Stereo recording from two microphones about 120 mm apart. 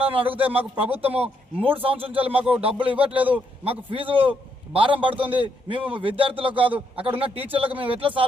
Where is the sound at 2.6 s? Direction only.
45° right (ahead or behind).